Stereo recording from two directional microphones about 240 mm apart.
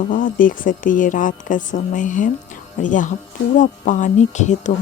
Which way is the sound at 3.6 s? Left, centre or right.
Left.